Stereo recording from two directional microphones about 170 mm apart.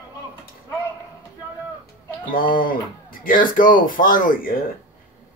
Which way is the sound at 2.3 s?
55° left (ahead or behind).